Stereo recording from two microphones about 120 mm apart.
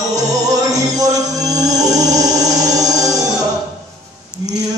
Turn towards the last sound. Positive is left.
turn(degrees=-30)  # may be behind; listen again after turning